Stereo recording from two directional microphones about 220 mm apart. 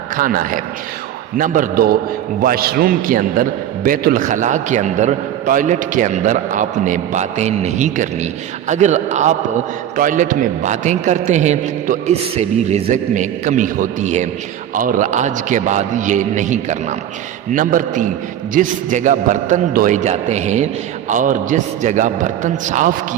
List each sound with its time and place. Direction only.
0.2 s a man's voice: 40° right (ahead or behind)